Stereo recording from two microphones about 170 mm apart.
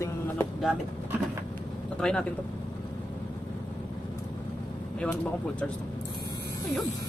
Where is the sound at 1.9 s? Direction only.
5° left (ahead or behind).